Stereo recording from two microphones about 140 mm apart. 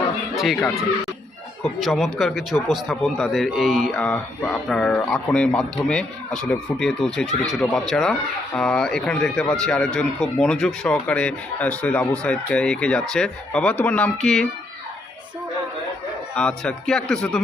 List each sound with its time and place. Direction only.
0.3 s speech: centre (ahead or behind)
1.8 s speech: centre (ahead or behind)
4.0 s speech: 10° left (ahead or behind)
16.3 s speech: 10° left (ahead or behind)